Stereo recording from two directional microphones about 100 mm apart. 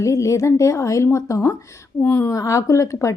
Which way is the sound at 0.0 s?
30° left (ahead or behind).